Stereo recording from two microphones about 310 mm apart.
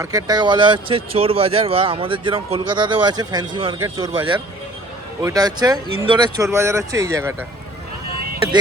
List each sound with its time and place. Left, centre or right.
0.0 s speech: centre